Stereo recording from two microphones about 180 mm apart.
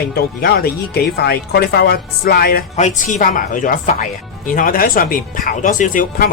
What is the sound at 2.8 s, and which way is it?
Speech, 40° left (ahead or behind).